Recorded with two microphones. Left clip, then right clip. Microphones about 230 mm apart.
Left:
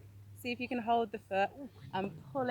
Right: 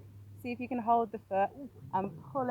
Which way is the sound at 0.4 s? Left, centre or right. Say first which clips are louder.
Right 3 dB; centre.